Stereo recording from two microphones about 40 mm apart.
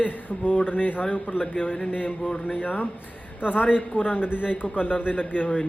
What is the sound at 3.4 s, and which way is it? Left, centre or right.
Speech, right.